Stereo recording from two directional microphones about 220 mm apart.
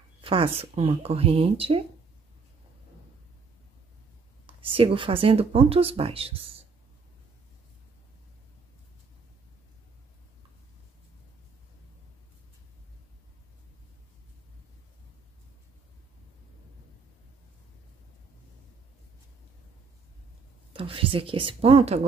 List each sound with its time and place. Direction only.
0.2 s speech: 25° right (ahead or behind)
4.5 s speech: 25° right (ahead or behind)
20.7 s speech: 25° right (ahead or behind)